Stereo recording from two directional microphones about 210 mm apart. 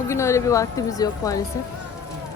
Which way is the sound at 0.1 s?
15° left (ahead or behind).